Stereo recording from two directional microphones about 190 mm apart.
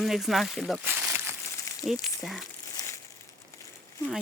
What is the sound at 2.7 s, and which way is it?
Crumpling, 15° left (ahead or behind).